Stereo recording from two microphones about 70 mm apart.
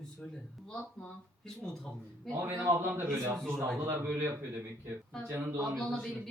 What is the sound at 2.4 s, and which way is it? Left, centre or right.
A man's voice, right.